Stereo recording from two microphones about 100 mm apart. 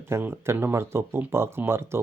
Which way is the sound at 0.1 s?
25° right (ahead or behind).